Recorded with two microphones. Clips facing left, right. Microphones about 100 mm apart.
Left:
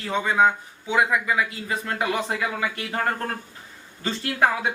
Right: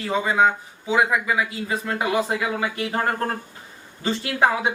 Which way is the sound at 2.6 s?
30° right (ahead or behind).